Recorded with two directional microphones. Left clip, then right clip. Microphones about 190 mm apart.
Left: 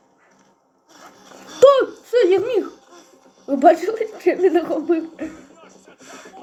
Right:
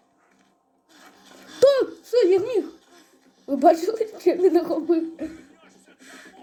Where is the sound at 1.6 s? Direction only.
Centre (ahead or behind).